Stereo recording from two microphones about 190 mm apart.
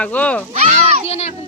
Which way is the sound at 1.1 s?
35° left (ahead or behind).